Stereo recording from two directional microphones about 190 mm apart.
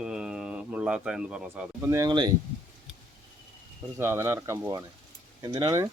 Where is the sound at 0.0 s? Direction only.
5° right (ahead or behind); by 2.3 s 20° right (ahead or behind).